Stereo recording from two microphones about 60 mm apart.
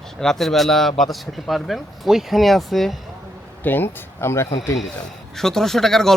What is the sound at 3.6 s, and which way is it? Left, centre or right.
Speech, left.